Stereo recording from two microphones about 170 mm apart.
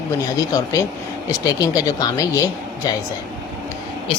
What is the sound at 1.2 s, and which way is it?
A woman's voice, 20° left (ahead or behind).